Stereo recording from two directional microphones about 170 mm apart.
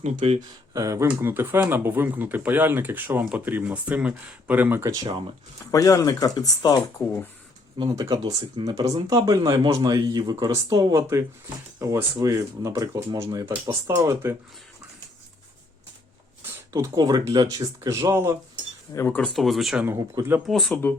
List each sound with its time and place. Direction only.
0.2 s speech: 35° right (ahead or behind)
0.7 s speech: 20° right (ahead or behind)
5.7 s speech: 20° left (ahead or behind)
7.8 s speech: 20° right (ahead or behind)
16.7 s speech: 20° right (ahead or behind)
18.9 s speech: 10° left (ahead or behind)
19.8 s speech: 15° right (ahead or behind)
20.5 s speech: centre (ahead or behind)